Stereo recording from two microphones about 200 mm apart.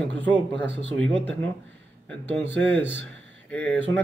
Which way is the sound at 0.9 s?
5° left (ahead or behind).